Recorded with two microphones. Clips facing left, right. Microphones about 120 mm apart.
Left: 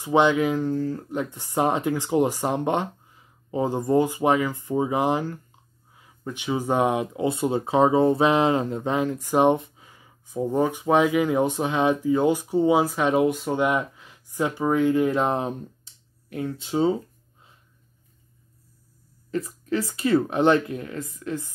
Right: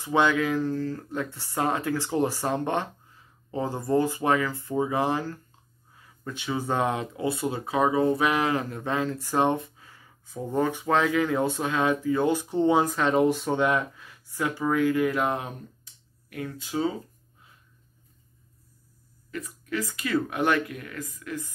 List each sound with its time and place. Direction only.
0.0 s speech: 20° left (ahead or behind); by 13.6 s centre (ahead or behind)
13.6 s speech: 15° left (ahead or behind)
19.3 s speech: 30° left (ahead or behind)